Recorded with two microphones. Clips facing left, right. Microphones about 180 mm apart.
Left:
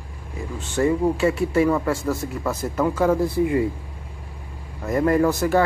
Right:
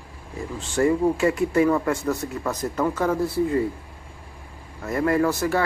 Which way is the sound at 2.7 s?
10° left (ahead or behind).